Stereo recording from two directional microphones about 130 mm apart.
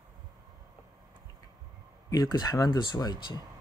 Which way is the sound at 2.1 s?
30° left (ahead or behind).